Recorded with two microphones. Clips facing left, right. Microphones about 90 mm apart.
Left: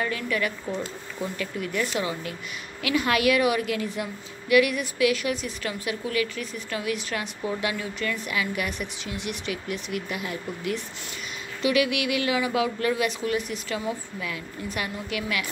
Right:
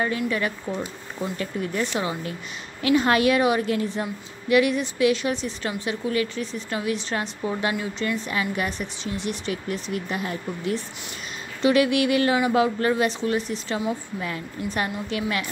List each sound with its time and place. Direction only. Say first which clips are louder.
0.0 s a woman's voice: right 3 dB; 30° right (ahead or behind)
0.7 s speech: right 1 dB; 15° right (ahead or behind)
1.4 s a woman's voice: right 2 dB; 35° right (ahead or behind)
14.2 s a woman's voice: right 1 dB; 40° right (ahead or behind)